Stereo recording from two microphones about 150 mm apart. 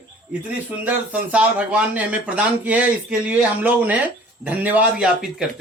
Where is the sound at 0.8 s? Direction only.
10° right (ahead or behind).